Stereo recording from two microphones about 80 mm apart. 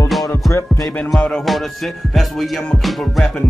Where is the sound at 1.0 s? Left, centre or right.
Centre.